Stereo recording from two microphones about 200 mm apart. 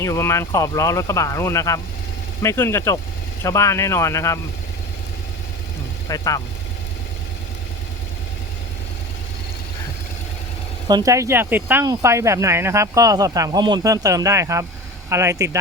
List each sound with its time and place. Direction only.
0.0 s speech: 15° left (ahead or behind)
6.1 s speech: 20° left (ahead or behind)
10.8 s speech: 20° right (ahead or behind)